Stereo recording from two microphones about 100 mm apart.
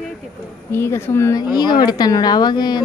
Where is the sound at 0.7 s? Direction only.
25° left (ahead or behind).